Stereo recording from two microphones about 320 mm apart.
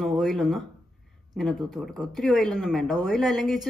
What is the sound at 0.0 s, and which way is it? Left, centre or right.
Speech, centre.